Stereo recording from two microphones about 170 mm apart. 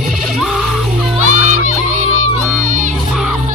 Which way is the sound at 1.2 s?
45° right (ahead or behind).